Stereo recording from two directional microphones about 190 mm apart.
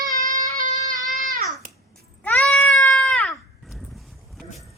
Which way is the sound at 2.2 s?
10° left (ahead or behind).